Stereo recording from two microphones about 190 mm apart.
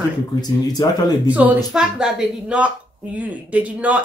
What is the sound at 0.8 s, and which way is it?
Speech, 20° left (ahead or behind).